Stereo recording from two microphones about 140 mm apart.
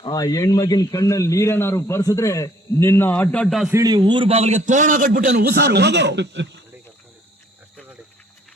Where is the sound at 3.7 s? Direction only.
25° right (ahead or behind); by 5.6 s 85° right.